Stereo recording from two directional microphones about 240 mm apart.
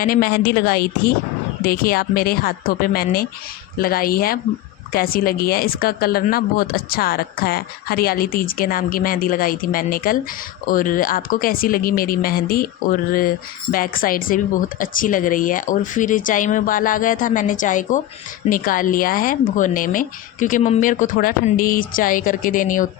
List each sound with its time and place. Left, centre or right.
0.0 s speech: left